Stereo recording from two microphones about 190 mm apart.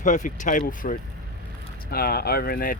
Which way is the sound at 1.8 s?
55° left (ahead or behind).